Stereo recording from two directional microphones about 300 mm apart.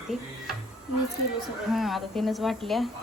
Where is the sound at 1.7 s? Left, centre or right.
Centre.